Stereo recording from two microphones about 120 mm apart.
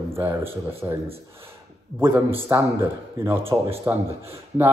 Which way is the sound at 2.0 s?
20° right (ahead or behind).